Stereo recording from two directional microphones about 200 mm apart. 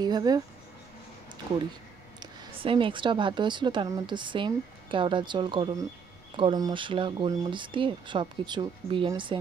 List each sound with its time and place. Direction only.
0.0 s speech: 20° right (ahead or behind)
2.1 s a woman's voice: 25° right (ahead or behind)